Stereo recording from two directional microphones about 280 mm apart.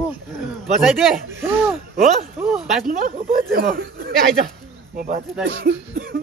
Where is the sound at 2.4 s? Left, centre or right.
Centre.